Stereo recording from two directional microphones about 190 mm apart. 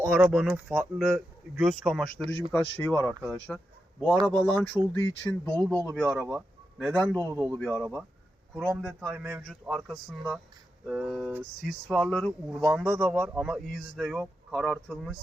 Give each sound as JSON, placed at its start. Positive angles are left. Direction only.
{"t": 0.0, "sound": "speech", "side_deg": -5}
{"t": 3.1, "sound": "speech", "side_deg": -5}
{"t": 3.3, "sound": "speech", "side_deg": 5}
{"t": 6.3, "sound": "a sound", "side_deg": 0}
{"t": 7.2, "sound": "a man's voice", "side_deg": -20}